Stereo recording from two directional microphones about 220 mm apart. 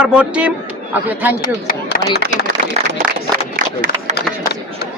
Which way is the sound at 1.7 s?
40° left (ahead or behind).